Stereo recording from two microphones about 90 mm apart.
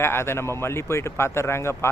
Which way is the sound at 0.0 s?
25° left (ahead or behind).